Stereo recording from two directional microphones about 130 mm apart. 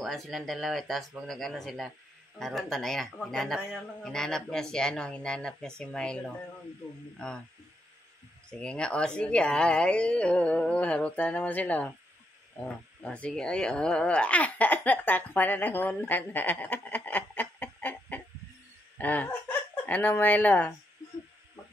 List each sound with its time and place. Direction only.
0.0 s a man's voice: centre (ahead or behind)
8.5 s a woman's voice: 5° left (ahead or behind)
18.9 s laughter: 10° left (ahead or behind)
19.9 s a woman's voice: 15° left (ahead or behind)